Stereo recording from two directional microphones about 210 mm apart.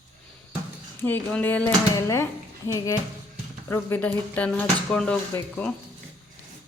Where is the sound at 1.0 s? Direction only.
10° left (ahead or behind).